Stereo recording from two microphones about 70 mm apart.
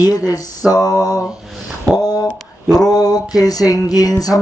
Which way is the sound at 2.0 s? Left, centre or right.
Left.